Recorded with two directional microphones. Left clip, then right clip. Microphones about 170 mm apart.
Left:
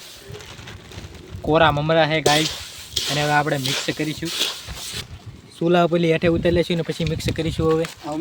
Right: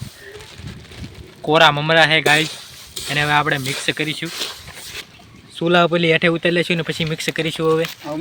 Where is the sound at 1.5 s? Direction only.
Centre (ahead or behind).